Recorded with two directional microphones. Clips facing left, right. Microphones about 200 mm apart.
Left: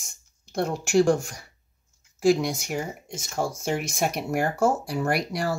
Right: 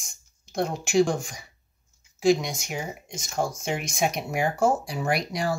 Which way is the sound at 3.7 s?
5° left (ahead or behind).